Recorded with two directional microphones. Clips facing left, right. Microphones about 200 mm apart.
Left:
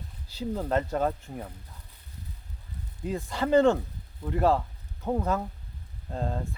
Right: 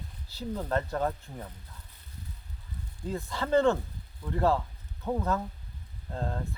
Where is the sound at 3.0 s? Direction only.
15° left (ahead or behind).